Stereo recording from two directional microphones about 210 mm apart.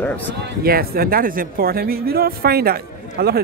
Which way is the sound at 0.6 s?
45° right (ahead or behind).